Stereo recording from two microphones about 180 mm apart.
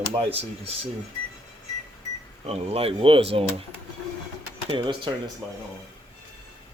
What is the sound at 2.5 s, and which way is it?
Speech, 35° right (ahead or behind).